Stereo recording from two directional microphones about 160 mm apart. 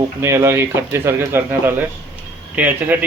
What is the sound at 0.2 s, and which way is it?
Speech, 15° right (ahead or behind).